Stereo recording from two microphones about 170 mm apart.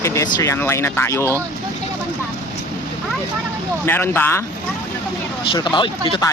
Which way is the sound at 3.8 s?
10° left (ahead or behind).